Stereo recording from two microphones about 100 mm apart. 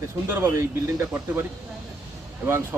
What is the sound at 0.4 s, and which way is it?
Speech, 30° right (ahead or behind).